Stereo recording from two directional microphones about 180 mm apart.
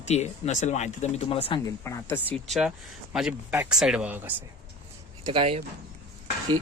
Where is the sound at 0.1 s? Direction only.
40° left (ahead or behind).